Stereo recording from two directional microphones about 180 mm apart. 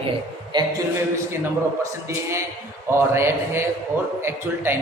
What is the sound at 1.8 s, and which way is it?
A man's voice, 15° right (ahead or behind).